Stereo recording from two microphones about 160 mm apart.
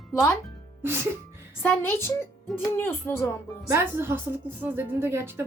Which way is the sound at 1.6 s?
15° left (ahead or behind).